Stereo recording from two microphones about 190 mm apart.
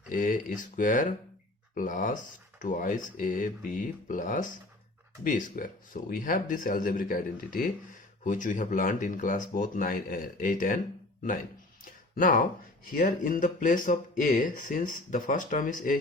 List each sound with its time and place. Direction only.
0.1 s speech: 45° left (ahead or behind)
11.9 s a sound: 45° left (ahead or behind)
12.9 s speech: 45° left (ahead or behind)